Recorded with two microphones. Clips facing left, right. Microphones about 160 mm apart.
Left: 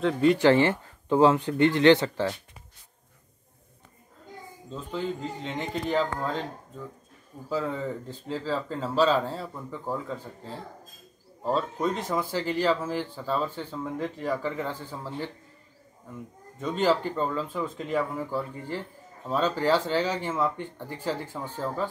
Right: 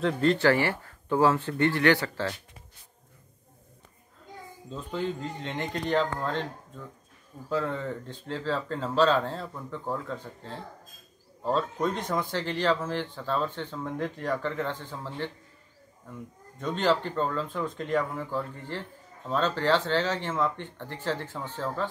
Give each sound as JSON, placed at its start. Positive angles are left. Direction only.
{"t": 0.0, "sound": "a man's voice", "side_deg": 5}
{"t": 0.4, "sound": "speech", "side_deg": 20}
{"t": 4.6, "sound": "a man's voice", "side_deg": 0}
{"t": 7.4, "sound": "a man's voice", "side_deg": 5}
{"t": 16.5, "sound": "speech", "side_deg": 5}